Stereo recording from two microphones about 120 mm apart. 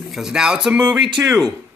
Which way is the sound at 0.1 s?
5° right (ahead or behind).